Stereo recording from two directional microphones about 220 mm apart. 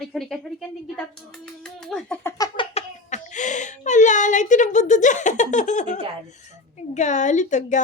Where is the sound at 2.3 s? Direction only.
15° left (ahead or behind).